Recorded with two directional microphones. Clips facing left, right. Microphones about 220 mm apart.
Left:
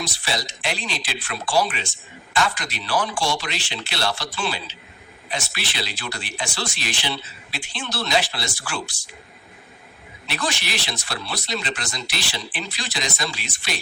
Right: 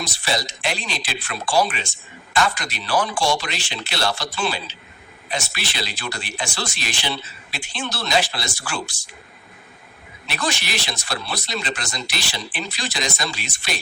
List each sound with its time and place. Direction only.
0.0 s speech: 45° right (ahead or behind)
7.5 s speech: 45° right (ahead or behind)
10.2 s speech: 45° right (ahead or behind)